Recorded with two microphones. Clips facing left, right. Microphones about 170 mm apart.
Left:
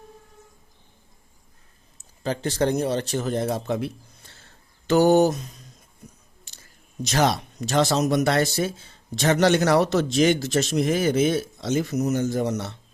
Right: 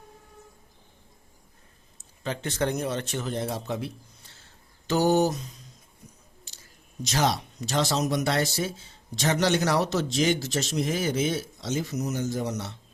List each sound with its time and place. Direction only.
2.2 s speech: 35° left (ahead or behind)
4.9 s speech: 60° left (ahead or behind)
7.0 s speech: 60° left (ahead or behind)